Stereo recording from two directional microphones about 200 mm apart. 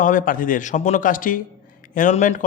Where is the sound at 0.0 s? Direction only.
40° left (ahead or behind).